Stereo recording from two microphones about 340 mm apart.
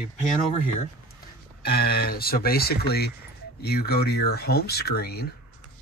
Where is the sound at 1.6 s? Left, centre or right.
Left.